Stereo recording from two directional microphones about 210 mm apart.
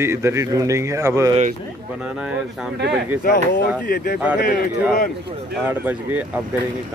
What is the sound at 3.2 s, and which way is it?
Speech, 45° left (ahead or behind).